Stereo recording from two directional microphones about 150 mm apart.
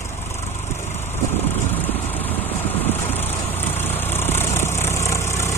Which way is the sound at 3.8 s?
15° left (ahead or behind).